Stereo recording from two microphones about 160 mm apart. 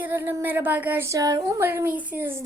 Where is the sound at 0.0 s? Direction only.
10° right (ahead or behind).